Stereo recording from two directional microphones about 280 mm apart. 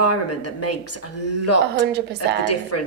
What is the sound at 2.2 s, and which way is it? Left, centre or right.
Speech, left.